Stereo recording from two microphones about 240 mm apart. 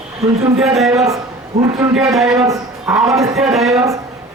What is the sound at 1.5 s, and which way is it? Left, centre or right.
Speech, right.